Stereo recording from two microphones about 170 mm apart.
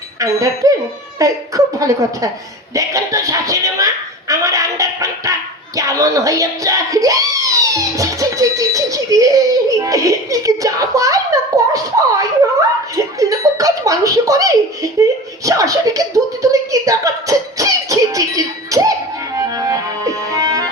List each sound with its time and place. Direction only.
0.2 s speech: 20° right (ahead or behind)
19.4 s music: 20° right (ahead or behind)